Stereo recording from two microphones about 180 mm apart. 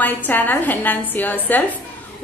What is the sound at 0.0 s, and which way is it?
A woman's voice, 10° left (ahead or behind).